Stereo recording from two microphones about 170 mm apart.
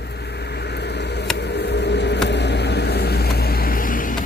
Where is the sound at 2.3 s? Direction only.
90° left; by 4.1 s 55° left (ahead or behind).